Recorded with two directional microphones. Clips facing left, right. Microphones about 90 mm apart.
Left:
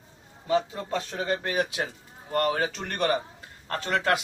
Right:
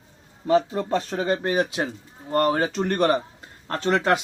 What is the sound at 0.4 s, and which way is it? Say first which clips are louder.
A man's voice: right 5 dB; 45° right (ahead or behind).